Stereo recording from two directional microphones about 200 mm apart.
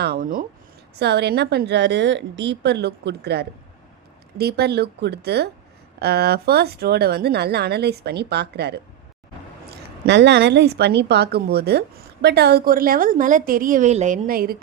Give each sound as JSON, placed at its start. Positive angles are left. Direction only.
{"t": 0.0, "sound": "speech", "side_deg": -50}
{"t": 0.9, "sound": "a woman's voice", "side_deg": -55}